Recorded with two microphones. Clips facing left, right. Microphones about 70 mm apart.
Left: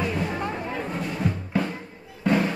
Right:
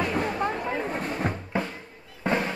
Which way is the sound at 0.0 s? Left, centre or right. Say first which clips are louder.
Right 1 dB; right.